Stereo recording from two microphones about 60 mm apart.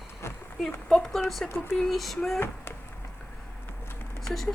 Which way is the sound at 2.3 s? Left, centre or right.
Left.